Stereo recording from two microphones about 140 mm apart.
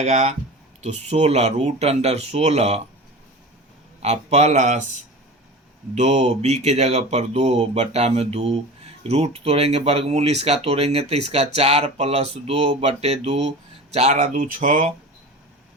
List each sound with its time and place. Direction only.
0.0 s speech: 55° right (ahead or behind)
4.0 s speech: 50° right (ahead or behind)
5.9 s speech: 55° right (ahead or behind)